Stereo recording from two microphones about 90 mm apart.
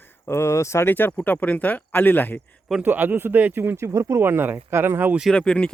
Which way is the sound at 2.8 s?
20° right (ahead or behind).